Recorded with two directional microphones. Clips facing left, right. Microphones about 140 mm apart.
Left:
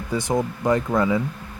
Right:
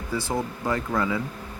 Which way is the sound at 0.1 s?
20° left (ahead or behind).